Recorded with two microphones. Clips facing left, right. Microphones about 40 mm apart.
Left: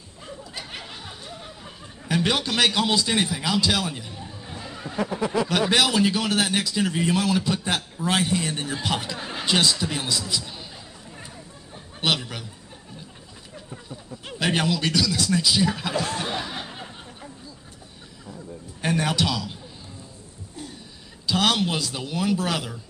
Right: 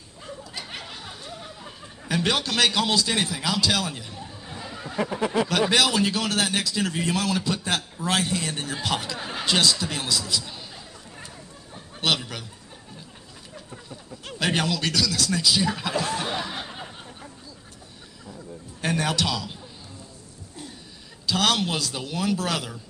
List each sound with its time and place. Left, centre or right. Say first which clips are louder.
0.4 s snicker: even; centre
4.9 s a sound: even; centre
5.2 s speech: even; right
5.5 s a man's voice: left 1 dB; centre
12.0 s speech: even; centre
13.7 s a man's voice: left 4 dB; centre
18.2 s a sound: left 1 dB; centre
21.3 s a man's voice: left 1 dB; centre